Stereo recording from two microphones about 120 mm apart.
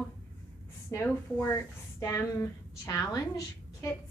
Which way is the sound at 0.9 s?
25° left (ahead or behind).